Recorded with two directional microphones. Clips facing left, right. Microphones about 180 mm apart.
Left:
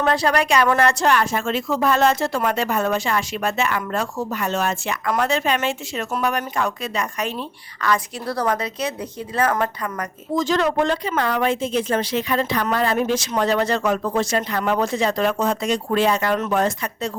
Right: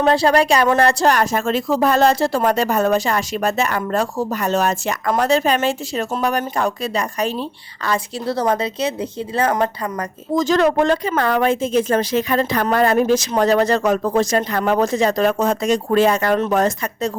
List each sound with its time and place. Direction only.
0.0 s speech: 30° right (ahead or behind)